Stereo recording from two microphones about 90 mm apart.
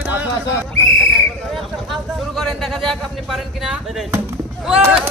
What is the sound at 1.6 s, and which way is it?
Speech, centre (ahead or behind).